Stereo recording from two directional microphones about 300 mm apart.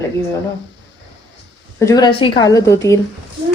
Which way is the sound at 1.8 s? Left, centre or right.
Centre.